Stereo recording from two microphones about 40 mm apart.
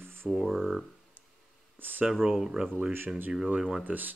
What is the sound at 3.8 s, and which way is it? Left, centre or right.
Speech, right.